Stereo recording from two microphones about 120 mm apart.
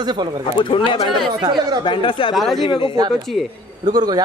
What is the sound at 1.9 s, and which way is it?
Speech, 45° left (ahead or behind).